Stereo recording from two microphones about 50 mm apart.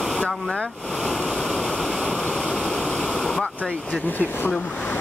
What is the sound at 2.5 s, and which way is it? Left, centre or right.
Stream, centre.